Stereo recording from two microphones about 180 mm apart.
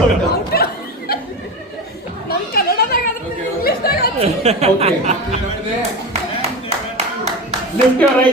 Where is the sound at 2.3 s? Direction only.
60° left (ahead or behind).